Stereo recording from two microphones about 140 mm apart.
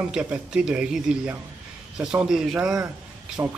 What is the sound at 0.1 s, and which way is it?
A man's voice, 5° right (ahead or behind).